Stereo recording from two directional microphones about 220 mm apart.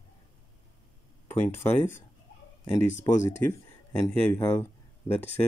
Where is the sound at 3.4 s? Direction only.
15° left (ahead or behind).